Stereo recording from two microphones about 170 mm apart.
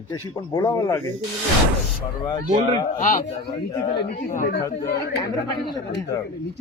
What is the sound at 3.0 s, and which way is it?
Speech, 50° left (ahead or behind).